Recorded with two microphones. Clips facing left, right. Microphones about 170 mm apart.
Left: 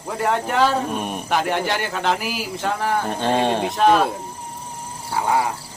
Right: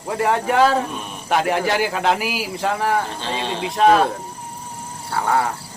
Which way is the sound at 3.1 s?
55° left (ahead or behind).